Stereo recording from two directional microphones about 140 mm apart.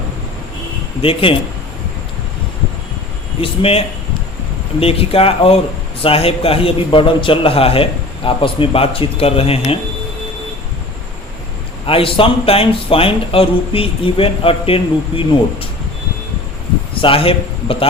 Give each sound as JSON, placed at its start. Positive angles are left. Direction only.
{"t": 1.0, "sound": "speech", "side_deg": 40}
{"t": 3.4, "sound": "a man's voice", "side_deg": 45}
{"t": 11.9, "sound": "speech", "side_deg": 40}
{"t": 17.0, "sound": "a man's voice", "side_deg": 40}